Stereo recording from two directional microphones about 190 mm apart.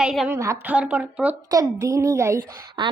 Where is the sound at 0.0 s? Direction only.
5° right (ahead or behind).